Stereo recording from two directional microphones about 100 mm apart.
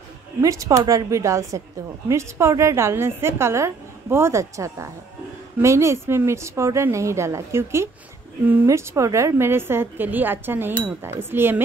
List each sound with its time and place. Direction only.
0.4 s a woman's voice: 35° right (ahead or behind)